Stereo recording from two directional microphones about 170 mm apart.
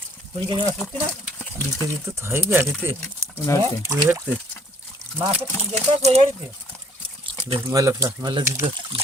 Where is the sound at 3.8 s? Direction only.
15° right (ahead or behind).